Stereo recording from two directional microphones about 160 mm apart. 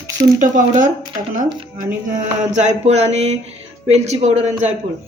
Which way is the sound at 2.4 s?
45° right (ahead or behind).